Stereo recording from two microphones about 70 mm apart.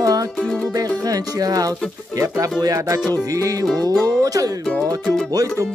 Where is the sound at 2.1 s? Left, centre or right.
Right.